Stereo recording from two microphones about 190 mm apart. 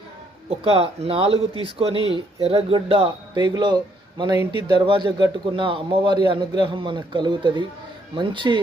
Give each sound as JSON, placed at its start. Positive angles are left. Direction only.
{"t": 0.6, "sound": "speech", "side_deg": -30}
{"t": 4.9, "sound": "speech", "side_deg": -25}